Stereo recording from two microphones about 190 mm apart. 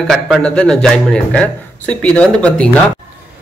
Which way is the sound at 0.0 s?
Centre (ahead or behind).